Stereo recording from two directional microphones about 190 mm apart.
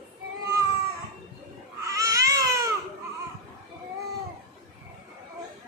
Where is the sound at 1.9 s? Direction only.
15° right (ahead or behind).